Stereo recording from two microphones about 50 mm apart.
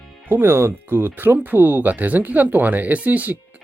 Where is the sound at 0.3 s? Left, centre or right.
Right.